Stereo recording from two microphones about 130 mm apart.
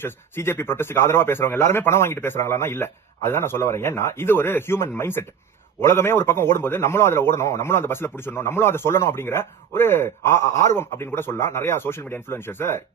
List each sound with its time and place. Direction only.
0.0 s a man's voice: 20° left (ahead or behind)